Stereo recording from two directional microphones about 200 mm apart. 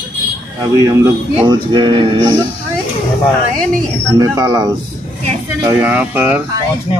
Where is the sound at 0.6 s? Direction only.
15° right (ahead or behind).